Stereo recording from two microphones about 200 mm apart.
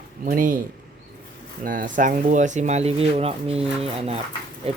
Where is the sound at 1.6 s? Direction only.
40° right (ahead or behind).